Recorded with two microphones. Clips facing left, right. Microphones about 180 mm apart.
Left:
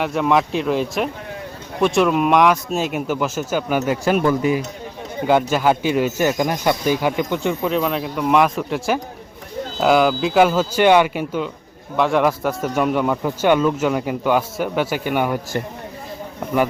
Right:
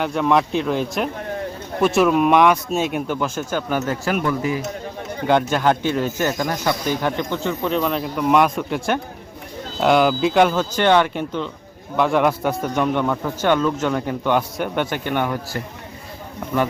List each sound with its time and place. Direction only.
0.0 s speech: centre (ahead or behind)
4.1 s speech: 30° left (ahead or behind)
5.2 s a man's voice: 5° left (ahead or behind)
7.6 s a man's voice: centre (ahead or behind)